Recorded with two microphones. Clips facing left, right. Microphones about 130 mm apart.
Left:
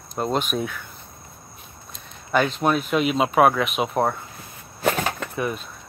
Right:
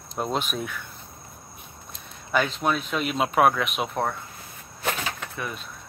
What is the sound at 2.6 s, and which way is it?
Speech, 5° left (ahead or behind).